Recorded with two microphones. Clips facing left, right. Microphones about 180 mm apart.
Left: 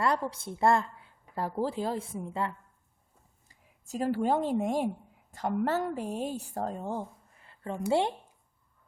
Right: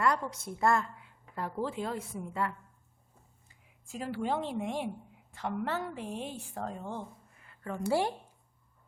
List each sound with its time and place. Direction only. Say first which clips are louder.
0.0 s a woman's voice: left 1 dB; 30° left (ahead or behind)
3.5 s a woman's voice: left 6 dB; 40° left (ahead or behind)
7.4 s a woman's voice: left 2 dB; 30° left (ahead or behind)